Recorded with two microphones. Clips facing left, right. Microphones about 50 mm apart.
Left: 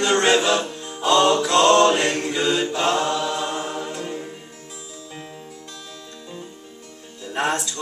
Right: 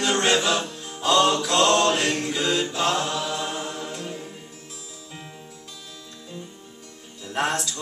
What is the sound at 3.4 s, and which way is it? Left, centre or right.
Choir, centre.